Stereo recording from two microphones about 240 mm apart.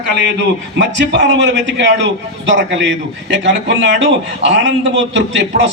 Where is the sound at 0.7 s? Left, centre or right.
Right.